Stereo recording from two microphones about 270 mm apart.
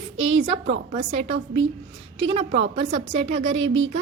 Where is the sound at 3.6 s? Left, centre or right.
Right.